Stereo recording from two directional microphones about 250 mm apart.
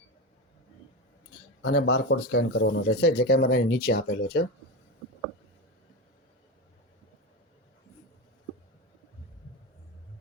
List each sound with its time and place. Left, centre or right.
1.6 s speech: left